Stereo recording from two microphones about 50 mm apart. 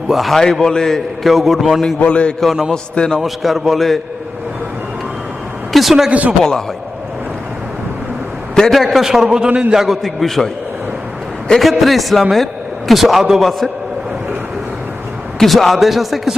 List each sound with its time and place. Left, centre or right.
0.1 s a man's voice: centre
2.0 s a man's voice: left
2.4 s a man's voice: centre
2.9 s a man's voice: centre
3.2 s a man's voice: centre
5.7 s a man's voice: centre
6.1 s a man's voice: right
8.7 s a man's voice: centre
9.2 s a man's voice: centre
9.8 s a man's voice: centre
11.6 s a man's voice: centre
15.4 s a man's voice: centre